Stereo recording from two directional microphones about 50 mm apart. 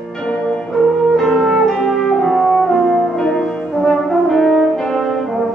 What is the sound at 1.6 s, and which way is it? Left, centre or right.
French horn, centre.